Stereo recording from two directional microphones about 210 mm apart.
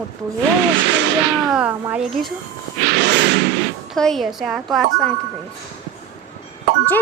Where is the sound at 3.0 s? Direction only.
55° right (ahead or behind).